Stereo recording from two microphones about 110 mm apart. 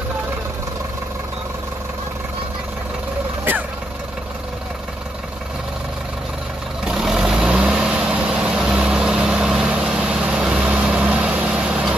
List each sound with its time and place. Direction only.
6.8 s vehicle: 5° right (ahead or behind)